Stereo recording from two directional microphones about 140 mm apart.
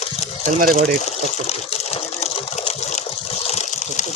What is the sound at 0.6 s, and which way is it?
Speech, 80° right.